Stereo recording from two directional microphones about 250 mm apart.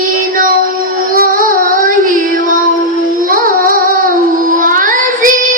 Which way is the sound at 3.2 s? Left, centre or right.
Right.